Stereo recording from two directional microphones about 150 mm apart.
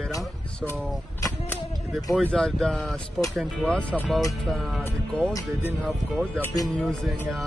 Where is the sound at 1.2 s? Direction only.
20° left (ahead or behind).